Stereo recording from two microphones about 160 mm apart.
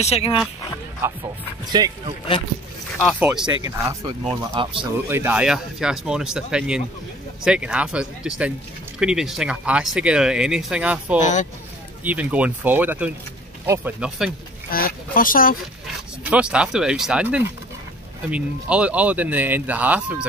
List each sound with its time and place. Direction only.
0.0 s speech: 40° left (ahead or behind)
1.7 s speech: 25° right (ahead or behind)
3.2 s speech: 10° right (ahead or behind)
4.2 s speech: 35° right (ahead or behind)
5.1 s speech: 10° right (ahead or behind)
14.7 s speech: 65° left (ahead or behind)
16.3 s speech: 5° right (ahead or behind)